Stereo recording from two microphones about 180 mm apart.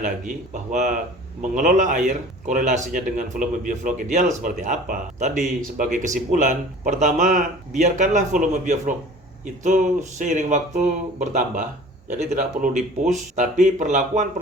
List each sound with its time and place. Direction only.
0.0 s speech: 45° right (ahead or behind)